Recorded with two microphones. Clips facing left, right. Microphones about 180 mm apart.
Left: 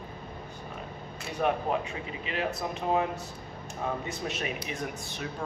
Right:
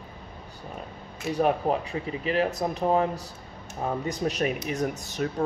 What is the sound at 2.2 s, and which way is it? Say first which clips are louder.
Speech: right 7 dB; 40° right (ahead or behind).